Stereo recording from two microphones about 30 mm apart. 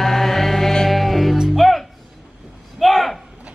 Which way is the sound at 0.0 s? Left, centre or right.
Centre.